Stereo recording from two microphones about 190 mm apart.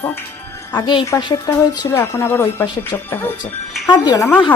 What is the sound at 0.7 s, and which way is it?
A woman's voice, 15° left (ahead or behind).